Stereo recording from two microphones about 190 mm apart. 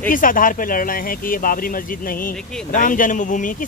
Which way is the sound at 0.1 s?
45° left (ahead or behind).